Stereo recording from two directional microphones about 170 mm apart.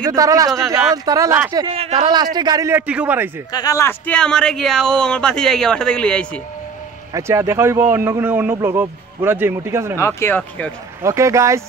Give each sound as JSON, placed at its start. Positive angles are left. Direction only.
{"t": 0.1, "sound": "speech", "side_deg": -20}
{"t": 1.7, "sound": "speech", "side_deg": -35}
{"t": 2.3, "sound": "speech", "side_deg": -25}
{"t": 2.9, "sound": "a man's voice", "side_deg": -10}
{"t": 3.5, "sound": "speech", "side_deg": 20}
{"t": 7.2, "sound": "a man's voice", "side_deg": -15}
{"t": 9.9, "sound": "speech", "side_deg": 15}
{"t": 11.0, "sound": "a man's voice", "side_deg": -15}